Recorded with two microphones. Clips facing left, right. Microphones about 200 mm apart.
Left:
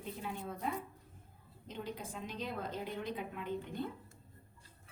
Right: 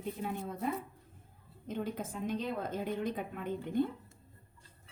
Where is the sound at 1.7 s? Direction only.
50° right (ahead or behind).